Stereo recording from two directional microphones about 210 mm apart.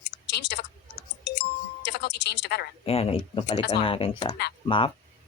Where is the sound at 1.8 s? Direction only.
55° left (ahead or behind).